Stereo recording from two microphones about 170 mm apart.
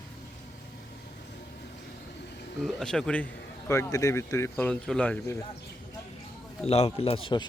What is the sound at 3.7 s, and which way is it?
Speech, 20° left (ahead or behind).